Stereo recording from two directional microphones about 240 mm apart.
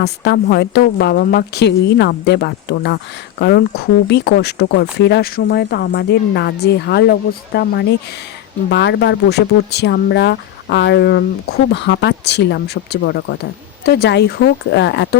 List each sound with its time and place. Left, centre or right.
0.0 s speech: left